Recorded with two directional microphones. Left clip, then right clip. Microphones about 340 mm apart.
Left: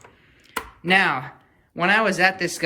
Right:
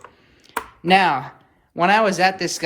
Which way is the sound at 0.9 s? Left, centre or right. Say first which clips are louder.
Right 3 dB; centre.